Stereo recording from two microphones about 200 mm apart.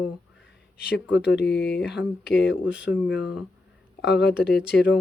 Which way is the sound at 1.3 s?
55° left (ahead or behind).